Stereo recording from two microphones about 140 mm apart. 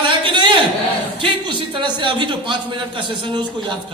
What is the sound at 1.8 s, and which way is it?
Speech, 35° right (ahead or behind).